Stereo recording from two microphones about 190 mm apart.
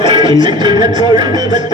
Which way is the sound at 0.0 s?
20° right (ahead or behind).